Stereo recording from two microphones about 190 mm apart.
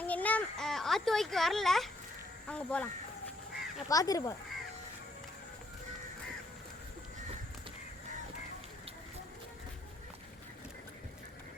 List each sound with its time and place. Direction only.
0.0 s a sound: 10° left (ahead or behind)
2.5 s speech: 5° left (ahead or behind)
3.8 s speech: 20° left (ahead or behind)